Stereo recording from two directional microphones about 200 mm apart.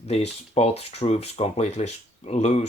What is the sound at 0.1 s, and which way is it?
Speech, 30° left (ahead or behind).